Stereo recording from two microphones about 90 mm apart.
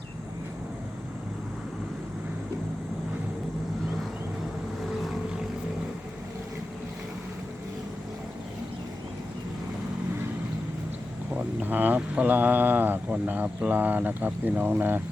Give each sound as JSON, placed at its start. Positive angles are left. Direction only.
{"t": 4.8, "sound": "boat", "side_deg": 0}
{"t": 11.3, "sound": "speech", "side_deg": -20}